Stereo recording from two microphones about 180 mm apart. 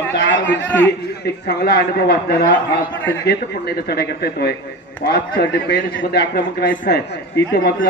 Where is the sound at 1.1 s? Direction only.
65° left (ahead or behind).